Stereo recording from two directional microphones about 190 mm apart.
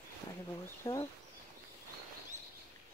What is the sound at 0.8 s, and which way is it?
Speech, 15° left (ahead or behind).